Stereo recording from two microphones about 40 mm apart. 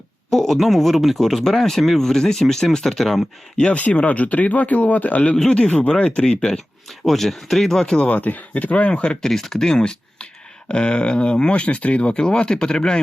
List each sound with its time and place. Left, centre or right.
0.3 s speech: centre
3.0 s speech: centre
3.8 s speech: left
7.0 s speech: centre
7.9 s speech: left
9.2 s speech: centre